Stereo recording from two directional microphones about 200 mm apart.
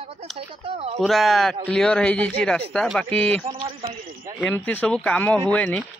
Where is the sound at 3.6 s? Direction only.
25° right (ahead or behind).